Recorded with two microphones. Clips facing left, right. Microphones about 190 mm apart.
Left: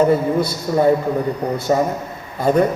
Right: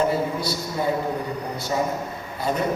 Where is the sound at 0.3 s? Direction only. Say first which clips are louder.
Left 9 dB; 55° left (ahead or behind).